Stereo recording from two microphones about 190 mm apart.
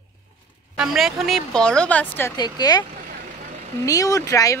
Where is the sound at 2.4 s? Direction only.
20° left (ahead or behind).